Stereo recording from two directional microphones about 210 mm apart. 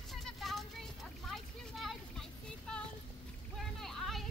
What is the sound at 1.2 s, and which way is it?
Vehicle, centre (ahead or behind).